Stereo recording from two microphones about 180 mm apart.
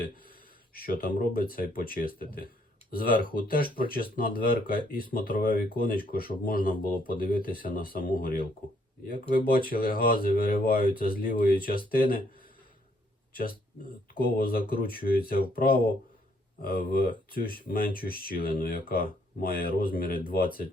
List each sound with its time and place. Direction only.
0.7 s speech: 55° left (ahead or behind)
14.1 s speech: 55° left (ahead or behind)